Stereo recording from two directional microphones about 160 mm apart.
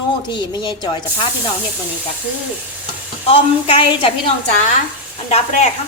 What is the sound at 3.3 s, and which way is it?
A woman's voice, 35° left (ahead or behind).